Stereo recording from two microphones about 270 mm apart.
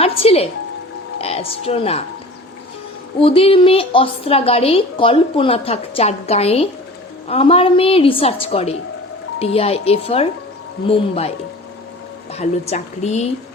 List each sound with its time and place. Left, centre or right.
0.0 s a woman's voice: left
3.2 s a woman's voice: centre
12.3 s a woman's voice: left